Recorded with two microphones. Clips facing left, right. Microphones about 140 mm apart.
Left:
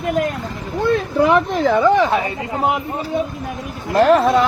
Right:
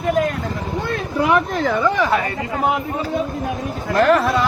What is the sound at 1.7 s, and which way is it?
Speech, 20° left (ahead or behind).